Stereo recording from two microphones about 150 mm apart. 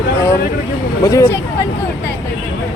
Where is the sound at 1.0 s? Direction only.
20° left (ahead or behind).